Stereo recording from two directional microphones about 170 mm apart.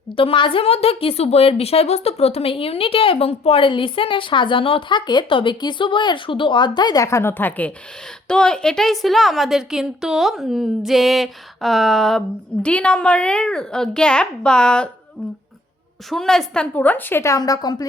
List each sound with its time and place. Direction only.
0.2 s a woman's voice: 30° left (ahead or behind); by 14.8 s 5° left (ahead or behind)
16.0 s a woman's voice: centre (ahead or behind); by 17.8 s 20° left (ahead or behind)